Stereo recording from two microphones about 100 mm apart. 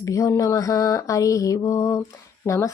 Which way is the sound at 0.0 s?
30° left (ahead or behind).